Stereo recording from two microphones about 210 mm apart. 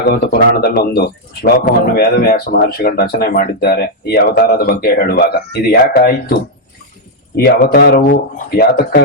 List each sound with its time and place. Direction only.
0.3 s speech: 50° left (ahead or behind)